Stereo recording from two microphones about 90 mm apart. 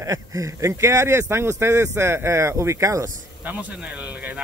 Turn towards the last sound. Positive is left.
turn(degrees=-35)  # may be behind; listen again after turning